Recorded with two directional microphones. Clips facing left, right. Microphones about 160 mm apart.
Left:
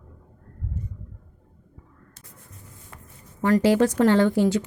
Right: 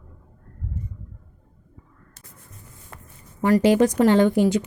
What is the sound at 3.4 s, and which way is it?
Speech, 15° right (ahead or behind).